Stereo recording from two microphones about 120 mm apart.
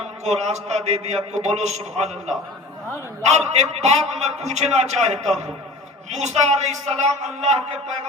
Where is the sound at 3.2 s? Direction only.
70° right (ahead or behind).